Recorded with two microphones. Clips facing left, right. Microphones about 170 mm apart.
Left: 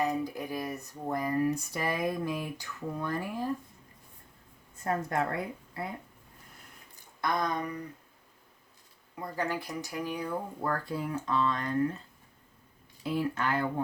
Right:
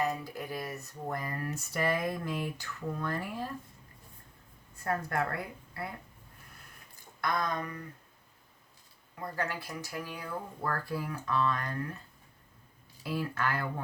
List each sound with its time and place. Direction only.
0.0 s speech: 15° left (ahead or behind)
4.8 s speech: 20° left (ahead or behind)
6.9 s a sound: 20° left (ahead or behind)
9.3 s speech: 15° left (ahead or behind)
13.0 s speech: 20° left (ahead or behind)